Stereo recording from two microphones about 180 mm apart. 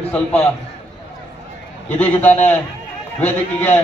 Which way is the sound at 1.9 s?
10° left (ahead or behind).